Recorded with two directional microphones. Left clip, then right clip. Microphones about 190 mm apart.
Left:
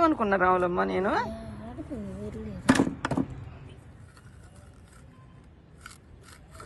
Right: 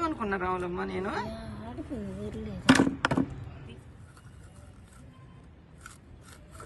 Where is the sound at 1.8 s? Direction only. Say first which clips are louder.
Left 1 dB; 30° left (ahead or behind).